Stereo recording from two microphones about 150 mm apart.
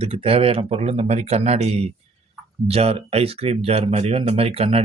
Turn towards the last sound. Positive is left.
turn(degrees=-40)  # may be behind; listen again after turning